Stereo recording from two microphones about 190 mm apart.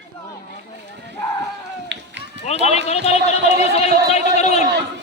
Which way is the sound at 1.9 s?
70° right (ahead or behind).